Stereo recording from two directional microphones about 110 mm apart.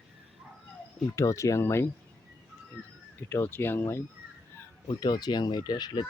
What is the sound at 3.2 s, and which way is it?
Speech, 20° left (ahead or behind).